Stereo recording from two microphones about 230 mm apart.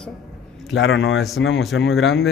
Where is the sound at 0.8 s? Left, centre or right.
Left.